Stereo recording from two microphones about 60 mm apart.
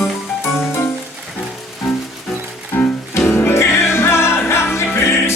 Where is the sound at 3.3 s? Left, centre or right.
Left.